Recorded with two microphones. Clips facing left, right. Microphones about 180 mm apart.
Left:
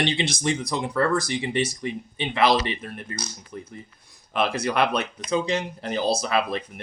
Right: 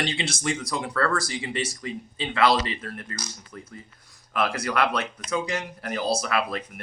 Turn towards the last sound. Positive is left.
turn(degrees=20)  # may be behind; listen again after turning